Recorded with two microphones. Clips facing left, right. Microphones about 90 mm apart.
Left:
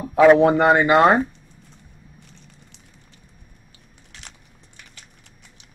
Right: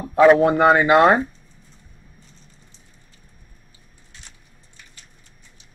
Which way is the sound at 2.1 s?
65° left (ahead or behind).